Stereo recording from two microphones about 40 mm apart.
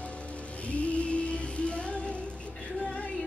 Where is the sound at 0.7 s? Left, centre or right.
Left.